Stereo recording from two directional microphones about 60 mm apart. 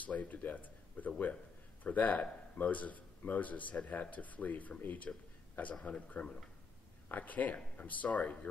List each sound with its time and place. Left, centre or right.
0.0 s a man's voice: left